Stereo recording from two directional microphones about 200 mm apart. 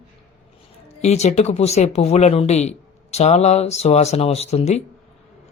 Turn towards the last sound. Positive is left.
turn(degrees=35)  # may be behind; listen again after turning